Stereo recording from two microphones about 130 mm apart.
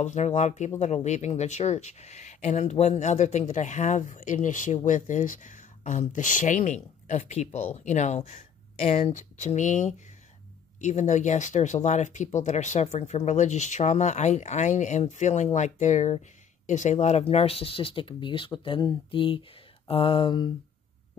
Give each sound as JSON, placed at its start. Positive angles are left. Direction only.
{"t": 0.0, "sound": "speech", "side_deg": 65}